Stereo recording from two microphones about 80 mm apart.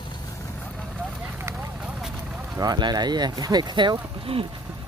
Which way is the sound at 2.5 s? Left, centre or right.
Right.